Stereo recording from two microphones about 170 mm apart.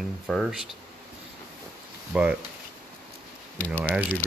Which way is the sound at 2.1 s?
5° right (ahead or behind).